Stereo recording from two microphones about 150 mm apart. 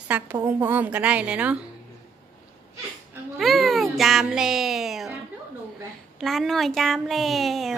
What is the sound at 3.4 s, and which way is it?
Speech, centre (ahead or behind).